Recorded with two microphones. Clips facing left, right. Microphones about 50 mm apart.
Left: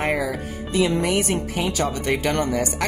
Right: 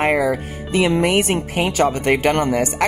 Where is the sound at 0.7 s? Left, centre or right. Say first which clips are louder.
Right 4 dB; right.